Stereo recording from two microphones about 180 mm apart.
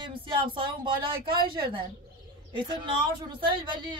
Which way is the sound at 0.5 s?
25° right (ahead or behind).